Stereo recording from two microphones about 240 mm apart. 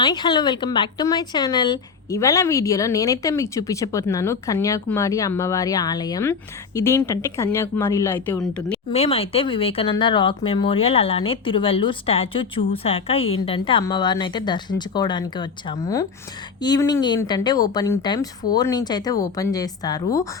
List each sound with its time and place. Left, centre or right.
0.0 s speech: centre
8.9 s speech: left